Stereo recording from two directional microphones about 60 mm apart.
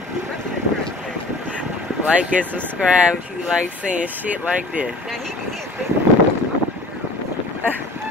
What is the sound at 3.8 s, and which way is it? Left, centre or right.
Speech, right.